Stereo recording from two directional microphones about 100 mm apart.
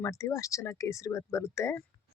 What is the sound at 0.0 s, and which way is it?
Speech, 30° left (ahead or behind).